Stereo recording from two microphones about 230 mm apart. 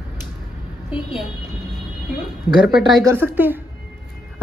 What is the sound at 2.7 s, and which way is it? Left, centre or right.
Speech, centre.